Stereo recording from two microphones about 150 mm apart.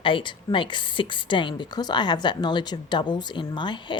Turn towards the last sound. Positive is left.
turn(degrees=30)  # may be behind; listen again after turning